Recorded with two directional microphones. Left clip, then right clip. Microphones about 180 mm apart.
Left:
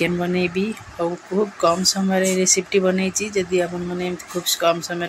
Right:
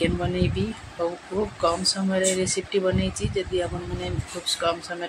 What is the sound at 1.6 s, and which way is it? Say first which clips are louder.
Speech: left 4 dB; 15° left (ahead or behind).